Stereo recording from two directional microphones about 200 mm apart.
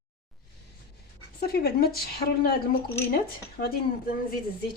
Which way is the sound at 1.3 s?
50° left (ahead or behind).